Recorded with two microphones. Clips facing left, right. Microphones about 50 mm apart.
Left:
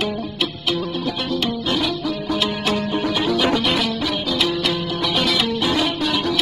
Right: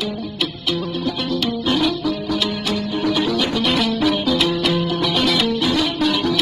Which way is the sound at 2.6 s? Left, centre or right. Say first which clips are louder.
Left 1 dB; left.